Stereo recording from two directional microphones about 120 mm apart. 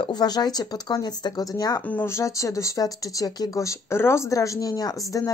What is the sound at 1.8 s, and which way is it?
Speech, 15° left (ahead or behind).